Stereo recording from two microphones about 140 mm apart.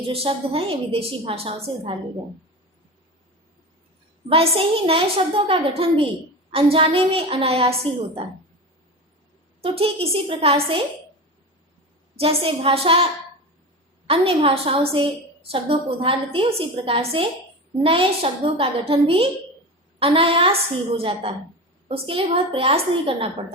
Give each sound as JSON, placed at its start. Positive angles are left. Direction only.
{"t": 0.1, "sound": "a woman's voice", "side_deg": -45}
{"t": 4.3, "sound": "a woman's voice", "side_deg": -40}
{"t": 9.6, "sound": "a woman's voice", "side_deg": -45}
{"t": 12.1, "sound": "a woman's voice", "side_deg": -45}
{"t": 14.1, "sound": "a woman's voice", "side_deg": -40}